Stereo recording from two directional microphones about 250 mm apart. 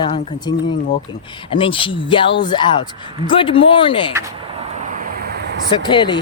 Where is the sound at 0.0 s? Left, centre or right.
Centre.